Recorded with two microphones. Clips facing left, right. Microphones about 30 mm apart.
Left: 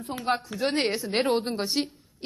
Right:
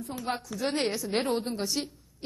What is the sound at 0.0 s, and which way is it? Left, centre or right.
Speech, left.